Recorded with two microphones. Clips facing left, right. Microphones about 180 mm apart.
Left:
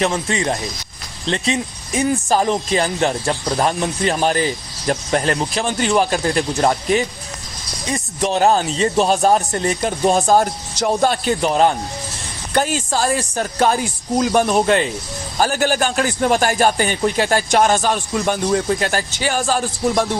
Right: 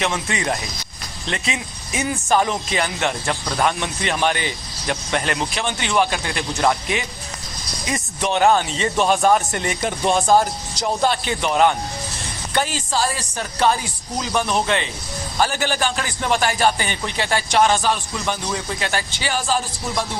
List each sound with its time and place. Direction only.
0.0 s speech: 30° left (ahead or behind)
2.0 s speech: 35° left (ahead or behind)
10.4 s speech: 50° left (ahead or behind); by 11.8 s 35° left (ahead or behind)
12.5 s a man's voice: 45° left (ahead or behind)